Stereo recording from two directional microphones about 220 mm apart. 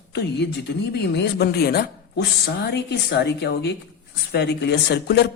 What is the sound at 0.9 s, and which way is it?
Speech, 50° left (ahead or behind).